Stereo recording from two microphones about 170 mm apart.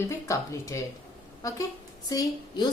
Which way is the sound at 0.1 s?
20° left (ahead or behind).